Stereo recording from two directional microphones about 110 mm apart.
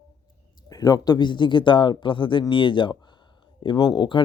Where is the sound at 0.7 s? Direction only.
35° left (ahead or behind).